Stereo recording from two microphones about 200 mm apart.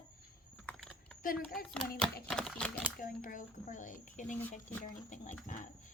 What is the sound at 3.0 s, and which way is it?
Speech, 45° left (ahead or behind).